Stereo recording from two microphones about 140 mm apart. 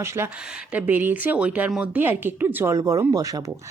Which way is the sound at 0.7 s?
10° right (ahead or behind).